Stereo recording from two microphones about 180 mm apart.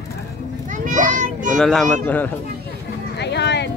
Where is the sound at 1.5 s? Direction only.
Centre (ahead or behind).